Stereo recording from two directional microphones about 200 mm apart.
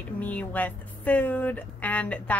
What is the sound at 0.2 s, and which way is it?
Speech, 5° left (ahead or behind).